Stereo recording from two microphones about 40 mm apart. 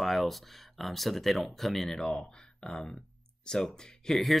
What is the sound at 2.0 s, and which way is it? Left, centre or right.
Speech, centre.